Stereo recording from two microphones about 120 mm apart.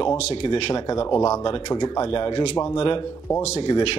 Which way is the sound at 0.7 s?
35° left (ahead or behind).